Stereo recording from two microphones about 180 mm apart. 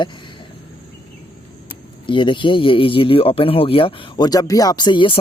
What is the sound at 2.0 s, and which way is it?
Speech, 25° left (ahead or behind).